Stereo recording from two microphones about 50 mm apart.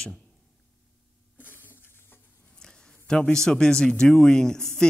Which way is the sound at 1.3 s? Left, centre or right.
Left.